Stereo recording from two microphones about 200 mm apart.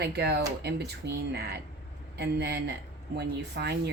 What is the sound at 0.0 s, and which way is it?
Speech, 55° right (ahead or behind).